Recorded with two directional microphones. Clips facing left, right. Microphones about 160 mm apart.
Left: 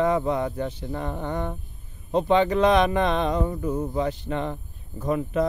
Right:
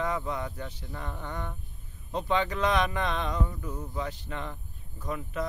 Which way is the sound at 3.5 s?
45° left (ahead or behind).